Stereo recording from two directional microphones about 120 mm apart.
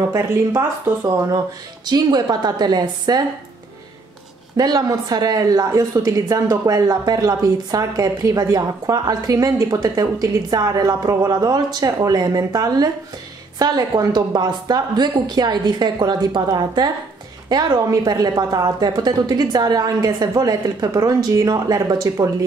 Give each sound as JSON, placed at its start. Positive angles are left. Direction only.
{"t": 0.0, "sound": "a woman's voice", "side_deg": -20}
{"t": 1.9, "sound": "a woman's voice", "side_deg": -35}
{"t": 4.6, "sound": "a woman's voice", "side_deg": -30}